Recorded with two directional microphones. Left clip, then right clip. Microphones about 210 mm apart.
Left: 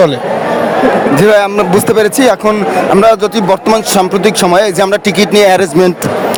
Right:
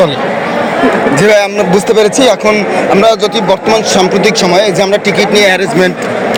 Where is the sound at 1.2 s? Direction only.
35° left (ahead or behind); by 5.5 s 50° left (ahead or behind).